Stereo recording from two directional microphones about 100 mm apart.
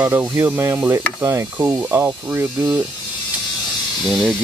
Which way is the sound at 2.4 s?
35° right (ahead or behind).